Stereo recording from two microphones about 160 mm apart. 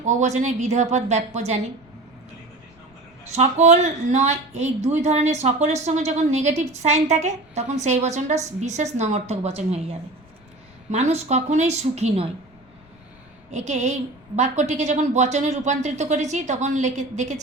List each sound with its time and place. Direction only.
0.0 s speech: 45° right (ahead or behind)
3.2 s speech: 45° right (ahead or behind)
13.5 s speech: 45° right (ahead or behind)